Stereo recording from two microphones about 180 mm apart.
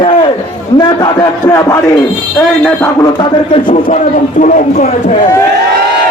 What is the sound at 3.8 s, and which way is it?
Speech, 45° left (ahead or behind).